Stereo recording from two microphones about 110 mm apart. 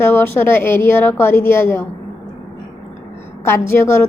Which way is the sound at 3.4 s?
20° left (ahead or behind).